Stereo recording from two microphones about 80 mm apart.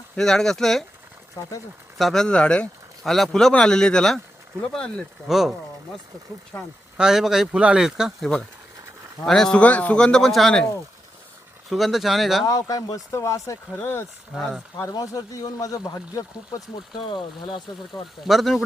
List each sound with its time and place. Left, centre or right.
0.2 s speech: centre
1.4 s speech: left
2.0 s speech: centre
3.0 s speech: centre
5.3 s speech: centre
9.2 s speech: centre
9.6 s speech: centre
11.7 s speech: centre
12.5 s speech: left
13.8 s speech: left
14.3 s speech: centre
15.0 s speech: left
17.0 s speech: left
17.5 s speech: centre